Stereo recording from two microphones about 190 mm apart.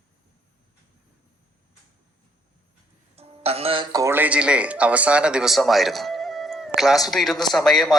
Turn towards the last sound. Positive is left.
turn(degrees=0)  # may be behind; listen again after turning